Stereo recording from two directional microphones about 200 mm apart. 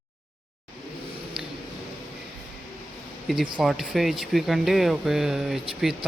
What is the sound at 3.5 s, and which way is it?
Speech, centre (ahead or behind).